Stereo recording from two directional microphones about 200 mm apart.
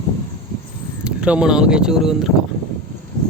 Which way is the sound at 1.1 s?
5° right (ahead or behind).